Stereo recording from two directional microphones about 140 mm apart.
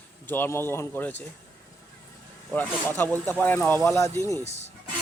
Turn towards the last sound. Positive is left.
turn(degrees=50)  # may be behind; listen again after turning